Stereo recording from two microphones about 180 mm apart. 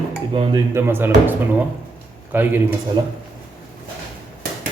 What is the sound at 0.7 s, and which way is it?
Speech, 10° right (ahead or behind).